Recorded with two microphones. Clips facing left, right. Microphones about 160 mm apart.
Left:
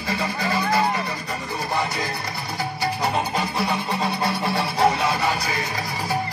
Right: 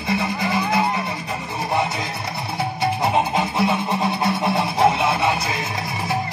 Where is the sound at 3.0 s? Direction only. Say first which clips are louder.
Right 4 dB; 20° right (ahead or behind).